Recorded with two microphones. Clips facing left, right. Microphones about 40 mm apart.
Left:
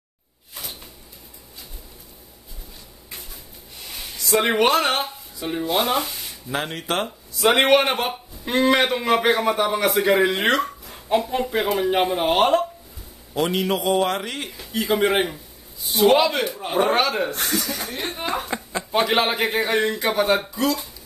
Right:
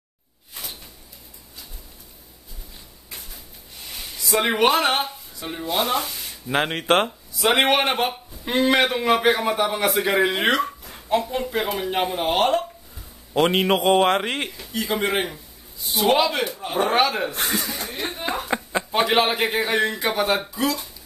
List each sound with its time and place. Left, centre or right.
4.2 s a man's voice: centre
5.4 s speech: centre
6.5 s a man's voice: right
7.1 s a man's voice: centre
13.3 s a man's voice: right
14.6 s a man's voice: centre
16.9 s speech: centre
18.5 s speech: right
18.9 s a man's voice: centre